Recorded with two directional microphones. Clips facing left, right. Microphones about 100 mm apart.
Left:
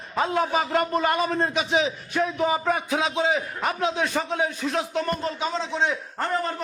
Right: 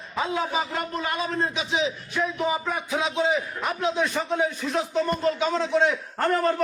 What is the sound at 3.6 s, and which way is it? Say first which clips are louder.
Speech: even; 90° left.